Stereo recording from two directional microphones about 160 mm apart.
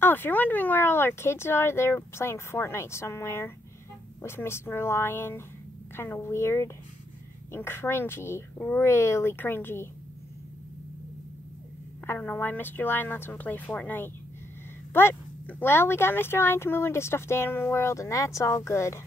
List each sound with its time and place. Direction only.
0.0 s speech: 10° left (ahead or behind)
12.1 s speech: 10° left (ahead or behind)